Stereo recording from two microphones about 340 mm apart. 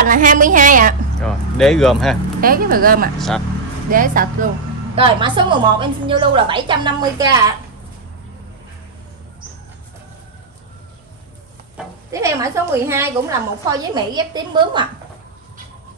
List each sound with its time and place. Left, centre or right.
0.0 s a woman's voice: right
1.2 s speech: centre
2.4 s a woman's voice: right
3.2 s speech: centre
3.9 s a woman's voice: right
11.7 s a woman's voice: centre